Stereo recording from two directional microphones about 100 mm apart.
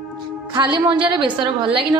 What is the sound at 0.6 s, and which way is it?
A woman's voice, 50° right (ahead or behind).